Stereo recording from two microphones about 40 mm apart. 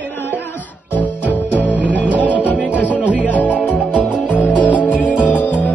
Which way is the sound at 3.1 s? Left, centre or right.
Left.